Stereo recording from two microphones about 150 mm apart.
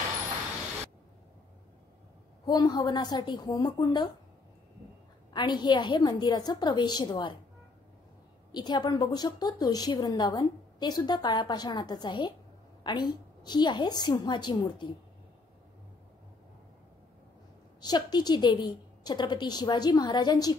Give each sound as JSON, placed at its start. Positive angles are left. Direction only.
{"t": 2.4, "sound": "a woman's voice", "side_deg": 30}
{"t": 5.3, "sound": "a woman's voice", "side_deg": 30}
{"t": 8.5, "sound": "a woman's voice", "side_deg": 30}
{"t": 17.7, "sound": "a woman's voice", "side_deg": 30}